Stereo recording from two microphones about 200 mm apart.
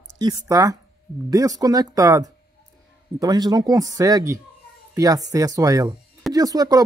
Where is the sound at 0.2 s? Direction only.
20° right (ahead or behind).